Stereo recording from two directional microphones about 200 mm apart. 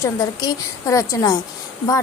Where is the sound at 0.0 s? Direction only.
15° left (ahead or behind).